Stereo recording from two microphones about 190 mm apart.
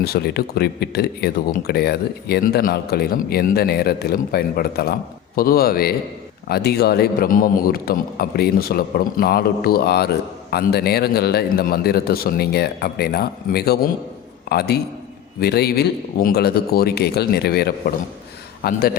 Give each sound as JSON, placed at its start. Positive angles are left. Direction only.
{"t": 0.0, "sound": "a man's voice", "side_deg": 55}